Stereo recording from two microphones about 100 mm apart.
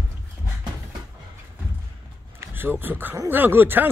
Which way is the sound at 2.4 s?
20° right (ahead or behind).